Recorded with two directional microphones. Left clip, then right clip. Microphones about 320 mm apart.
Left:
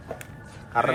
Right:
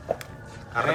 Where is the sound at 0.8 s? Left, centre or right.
Centre.